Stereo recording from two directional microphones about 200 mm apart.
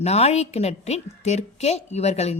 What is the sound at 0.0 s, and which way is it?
A woman's voice, 30° left (ahead or behind).